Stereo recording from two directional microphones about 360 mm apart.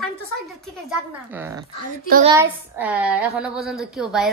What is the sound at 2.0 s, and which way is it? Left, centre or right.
Speech, right.